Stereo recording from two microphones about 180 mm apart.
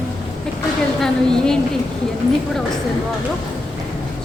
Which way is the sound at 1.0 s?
5° left (ahead or behind).